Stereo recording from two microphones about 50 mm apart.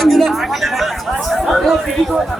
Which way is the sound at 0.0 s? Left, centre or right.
Centre.